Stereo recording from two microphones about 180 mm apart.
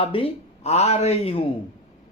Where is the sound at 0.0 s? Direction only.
30° left (ahead or behind).